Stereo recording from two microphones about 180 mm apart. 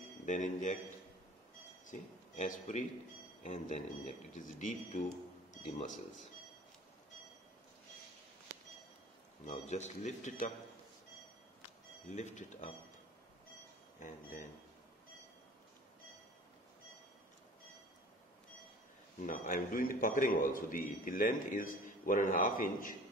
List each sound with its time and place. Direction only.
0.2 s a man's voice: 45° left (ahead or behind)
1.9 s a man's voice: 45° left (ahead or behind)
9.5 s speech: 40° left (ahead or behind)
12.1 s speech: 40° left (ahead or behind)
13.9 s speech: 45° left (ahead or behind)
19.2 s a man's voice: 50° left (ahead or behind)